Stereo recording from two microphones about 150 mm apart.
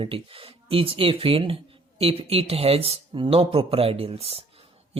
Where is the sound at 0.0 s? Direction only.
35° right (ahead or behind).